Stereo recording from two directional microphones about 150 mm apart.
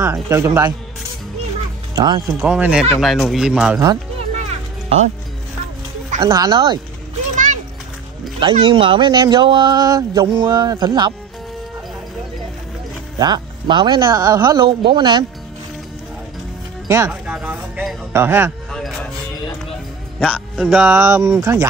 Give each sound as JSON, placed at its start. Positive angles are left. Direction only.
{"t": 0.0, "sound": "speech", "side_deg": -15}
{"t": 2.0, "sound": "speech", "side_deg": -25}
{"t": 2.3, "sound": "speech", "side_deg": -10}
{"t": 4.4, "sound": "music", "side_deg": -50}
{"t": 6.2, "sound": "speech", "side_deg": -25}
{"t": 8.4, "sound": "speech", "side_deg": -35}
{"t": 13.2, "sound": "speech", "side_deg": -30}
{"t": 16.8, "sound": "speech", "side_deg": -20}
{"t": 17.1, "sound": "speech", "side_deg": -10}
{"t": 18.7, "sound": "music", "side_deg": 0}
{"t": 20.2, "sound": "a man's voice", "side_deg": 5}
{"t": 20.8, "sound": "speech", "side_deg": -15}